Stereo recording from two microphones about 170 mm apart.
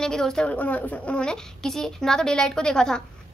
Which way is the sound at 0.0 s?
5° left (ahead or behind).